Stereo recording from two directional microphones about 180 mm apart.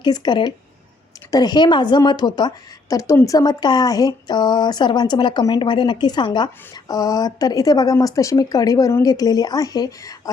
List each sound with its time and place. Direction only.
0.0 s speech: 25° left (ahead or behind)